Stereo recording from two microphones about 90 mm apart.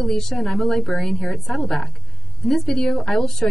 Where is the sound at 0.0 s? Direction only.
5° left (ahead or behind).